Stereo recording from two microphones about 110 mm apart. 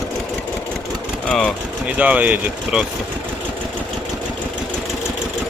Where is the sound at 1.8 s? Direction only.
15° right (ahead or behind).